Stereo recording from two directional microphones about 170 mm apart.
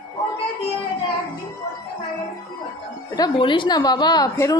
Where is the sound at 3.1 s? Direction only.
25° left (ahead or behind).